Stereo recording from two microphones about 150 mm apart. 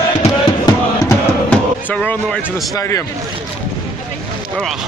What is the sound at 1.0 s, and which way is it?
Music, 10° left (ahead or behind).